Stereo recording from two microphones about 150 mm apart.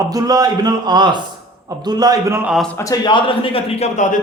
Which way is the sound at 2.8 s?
25° left (ahead or behind).